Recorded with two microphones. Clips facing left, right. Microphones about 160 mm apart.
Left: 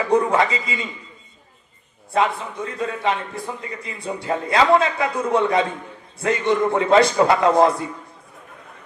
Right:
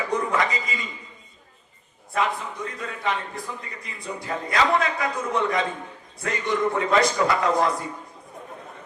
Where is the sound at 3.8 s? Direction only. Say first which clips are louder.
Left 6 dB; 25° left (ahead or behind).